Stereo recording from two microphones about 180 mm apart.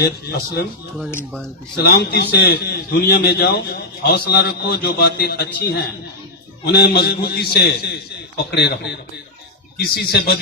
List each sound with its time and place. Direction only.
0.0 s a man's voice: 60° left (ahead or behind)
1.1 s speech: 5° left (ahead or behind)
1.7 s a man's voice: 65° left (ahead or behind)